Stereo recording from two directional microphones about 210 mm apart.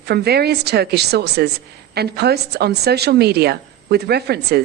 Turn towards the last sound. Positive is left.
turn(degrees=-50)  # may be behind; listen again after turning